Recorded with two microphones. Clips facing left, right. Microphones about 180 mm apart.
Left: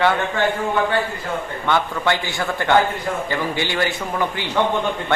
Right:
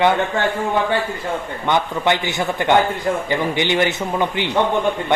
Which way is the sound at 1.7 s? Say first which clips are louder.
Right 2 dB; 20° right (ahead or behind).